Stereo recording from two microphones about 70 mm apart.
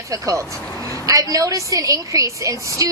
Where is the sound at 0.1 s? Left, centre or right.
Right.